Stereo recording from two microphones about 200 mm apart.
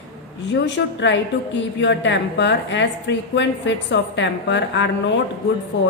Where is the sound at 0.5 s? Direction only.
65° left (ahead or behind).